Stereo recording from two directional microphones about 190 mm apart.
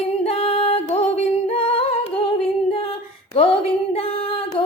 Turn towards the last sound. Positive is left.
turn(degrees=30)  # may be behind; listen again after turning